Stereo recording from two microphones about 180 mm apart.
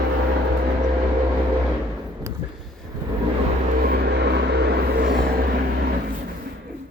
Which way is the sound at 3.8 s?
60° right (ahead or behind).